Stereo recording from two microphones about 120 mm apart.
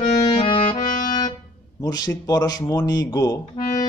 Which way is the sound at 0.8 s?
90° left.